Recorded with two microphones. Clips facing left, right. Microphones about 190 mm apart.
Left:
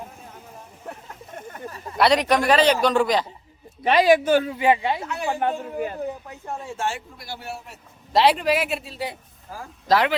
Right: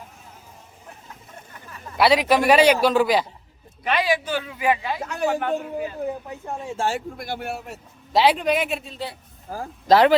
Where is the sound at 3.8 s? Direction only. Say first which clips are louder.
Left 6 dB; 40° left (ahead or behind).